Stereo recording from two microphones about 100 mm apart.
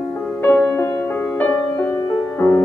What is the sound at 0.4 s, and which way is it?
Music, 20° left (ahead or behind).